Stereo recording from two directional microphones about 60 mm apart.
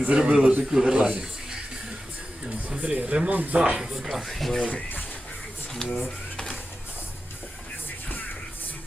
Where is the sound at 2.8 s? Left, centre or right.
Right.